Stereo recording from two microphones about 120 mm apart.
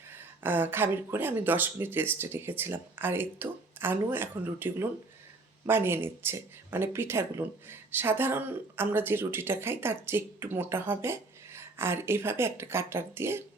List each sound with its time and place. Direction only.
0.1 s speech: 15° right (ahead or behind)